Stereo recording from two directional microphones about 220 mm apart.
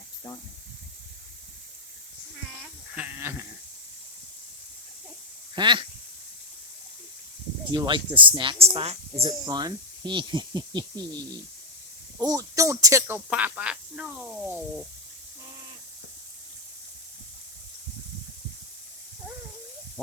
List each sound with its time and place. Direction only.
2.9 s goat: 10° right (ahead or behind)
5.5 s speech: 20° right (ahead or behind)
7.7 s speech: 20° right (ahead or behind); by 14.6 s 5° right (ahead or behind)